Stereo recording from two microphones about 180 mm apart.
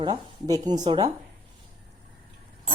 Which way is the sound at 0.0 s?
25° right (ahead or behind).